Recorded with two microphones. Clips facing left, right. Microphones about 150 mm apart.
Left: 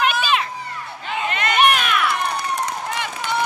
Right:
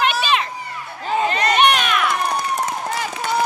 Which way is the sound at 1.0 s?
35° right (ahead or behind).